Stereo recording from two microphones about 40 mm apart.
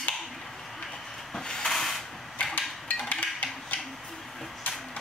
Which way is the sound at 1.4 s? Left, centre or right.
Centre.